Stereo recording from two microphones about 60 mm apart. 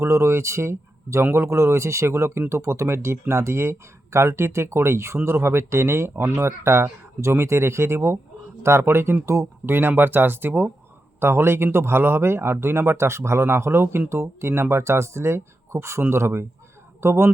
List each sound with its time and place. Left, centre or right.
0.0 s speech: right
9.2 s speech: right
9.6 s speech: right
11.2 s speech: right